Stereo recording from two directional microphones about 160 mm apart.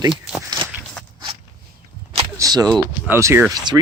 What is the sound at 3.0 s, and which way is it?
Speech, 15° right (ahead or behind).